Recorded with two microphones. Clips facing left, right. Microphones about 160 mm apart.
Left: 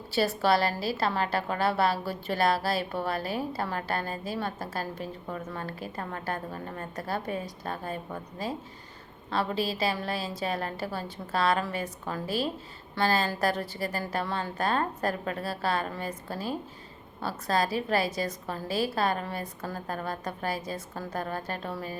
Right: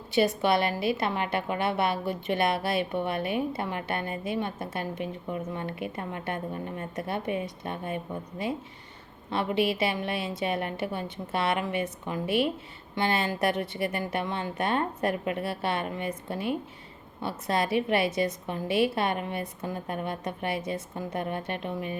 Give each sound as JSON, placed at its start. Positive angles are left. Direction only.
{"t": 0.1, "sound": "speech", "side_deg": -20}
{"t": 12.2, "sound": "speech", "side_deg": 30}
{"t": 13.0, "sound": "speech", "side_deg": -20}